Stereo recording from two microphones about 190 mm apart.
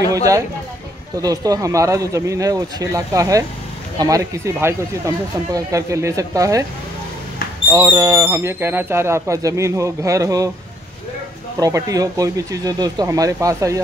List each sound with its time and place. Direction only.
0.1 s speech: 20° right (ahead or behind)
7.7 s speech: 15° right (ahead or behind)
11.6 s speech: 20° right (ahead or behind)